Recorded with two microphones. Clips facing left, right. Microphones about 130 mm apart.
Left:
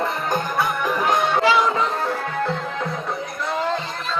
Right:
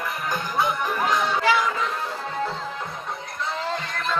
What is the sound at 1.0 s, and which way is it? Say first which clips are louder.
Music: left 3 dB; 55° left (ahead or behind).